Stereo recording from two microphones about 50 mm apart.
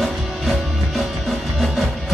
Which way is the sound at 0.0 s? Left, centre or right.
Centre.